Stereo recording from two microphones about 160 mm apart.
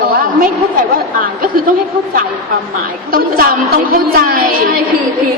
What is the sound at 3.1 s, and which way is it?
A woman's voice, 65° right (ahead or behind).